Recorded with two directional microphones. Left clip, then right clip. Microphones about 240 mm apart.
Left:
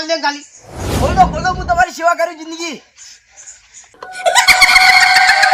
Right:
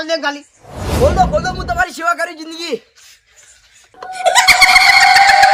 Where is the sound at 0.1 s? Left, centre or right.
Centre.